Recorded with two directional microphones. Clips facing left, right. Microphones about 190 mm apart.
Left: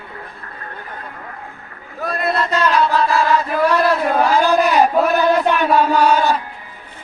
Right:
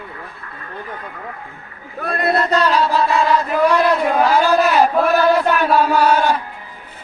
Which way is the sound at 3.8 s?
5° left (ahead or behind).